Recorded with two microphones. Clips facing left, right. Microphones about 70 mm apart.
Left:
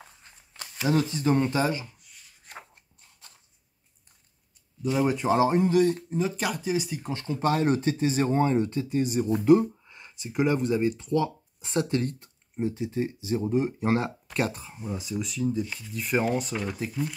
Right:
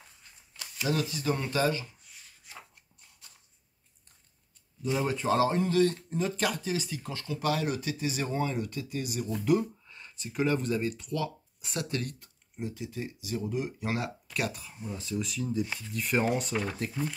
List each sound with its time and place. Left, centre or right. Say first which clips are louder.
0.6 s speech: left 5 dB; left
2.5 s a sound: left 5 dB; left
4.9 s speech: left 4 dB; centre
6.0 s speech: left 2 dB; centre
7.1 s speech: left 4 dB; left
14.9 s speech: left 2 dB; centre
15.2 s speech: left 5 dB; centre